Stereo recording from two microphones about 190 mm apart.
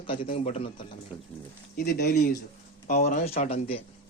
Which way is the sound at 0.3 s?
35° left (ahead or behind).